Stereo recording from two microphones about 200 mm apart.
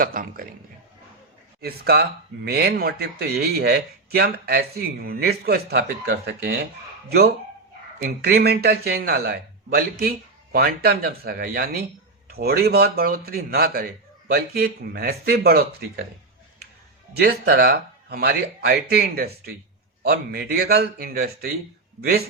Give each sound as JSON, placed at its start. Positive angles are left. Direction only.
{"t": 0.0, "sound": "a man's voice", "side_deg": -45}
{"t": 1.6, "sound": "a man's voice", "side_deg": -50}
{"t": 17.2, "sound": "a man's voice", "side_deg": -50}